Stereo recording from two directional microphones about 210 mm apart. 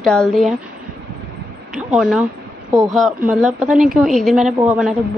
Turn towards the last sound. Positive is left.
turn(degrees=0)  # may be behind; listen again after turning